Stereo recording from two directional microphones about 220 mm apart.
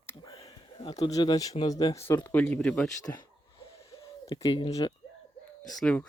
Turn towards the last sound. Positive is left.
turn(degrees=5)  # may be behind; listen again after turning